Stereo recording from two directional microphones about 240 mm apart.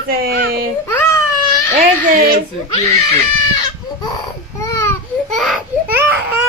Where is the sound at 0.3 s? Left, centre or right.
Right.